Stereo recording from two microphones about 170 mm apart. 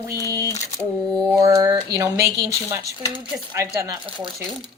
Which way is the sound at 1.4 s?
20° right (ahead or behind).